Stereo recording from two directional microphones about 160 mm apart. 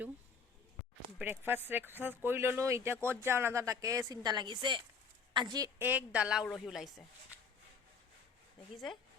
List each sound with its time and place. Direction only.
1.2 s a woman's voice: 15° right (ahead or behind)